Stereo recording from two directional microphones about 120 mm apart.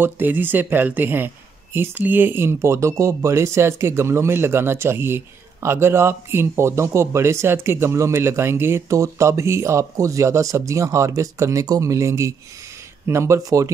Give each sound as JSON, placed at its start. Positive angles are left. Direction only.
{"t": 0.0, "sound": "a man's voice", "side_deg": -15}